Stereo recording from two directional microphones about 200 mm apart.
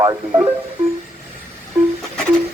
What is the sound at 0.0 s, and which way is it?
Speech, 20° right (ahead or behind).